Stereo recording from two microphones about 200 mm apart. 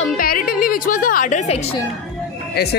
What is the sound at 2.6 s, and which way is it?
Speech, 55° left (ahead or behind).